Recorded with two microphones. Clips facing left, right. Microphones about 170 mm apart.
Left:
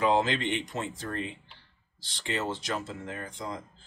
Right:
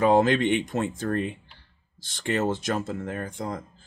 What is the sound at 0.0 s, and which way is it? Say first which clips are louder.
Speech: right 6 dB; 50° right (ahead or behind).